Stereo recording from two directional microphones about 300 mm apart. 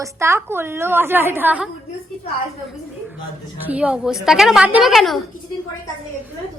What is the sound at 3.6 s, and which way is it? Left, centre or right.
A woman's voice, centre.